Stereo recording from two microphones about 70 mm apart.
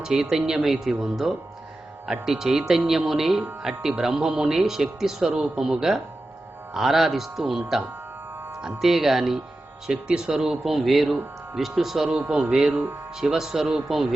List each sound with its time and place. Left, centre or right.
0.0 s speech: centre
8.8 s speech: centre
12.0 s speech: right; by 14.1 s centre